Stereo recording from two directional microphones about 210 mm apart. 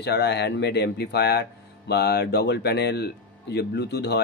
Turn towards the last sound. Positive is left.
turn(degrees=50)  # may be behind; listen again after turning